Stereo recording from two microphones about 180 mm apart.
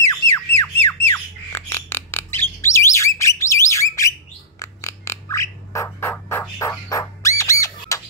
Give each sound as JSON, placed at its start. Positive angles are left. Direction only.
{"t": 0.0, "sound": "squawk", "side_deg": 15}
{"t": 4.6, "sound": "bird", "side_deg": 15}
{"t": 6.6, "sound": "squawk", "side_deg": 15}